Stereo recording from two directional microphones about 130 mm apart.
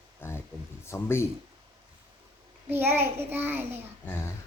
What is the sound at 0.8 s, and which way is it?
Speech, 20° left (ahead or behind).